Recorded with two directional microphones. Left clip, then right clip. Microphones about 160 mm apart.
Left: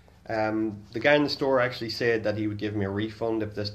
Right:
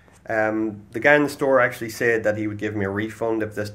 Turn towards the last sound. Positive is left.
turn(degrees=0)  # may be behind; listen again after turning